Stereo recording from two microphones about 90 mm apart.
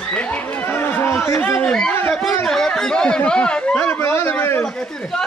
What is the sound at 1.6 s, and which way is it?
A man's voice, 10° left (ahead or behind).